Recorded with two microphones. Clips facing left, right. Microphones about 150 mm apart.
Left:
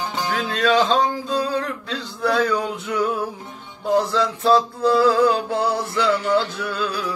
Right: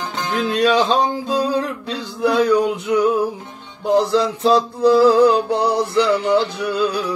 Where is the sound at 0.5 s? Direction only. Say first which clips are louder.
Right 2 dB; 15° right (ahead or behind).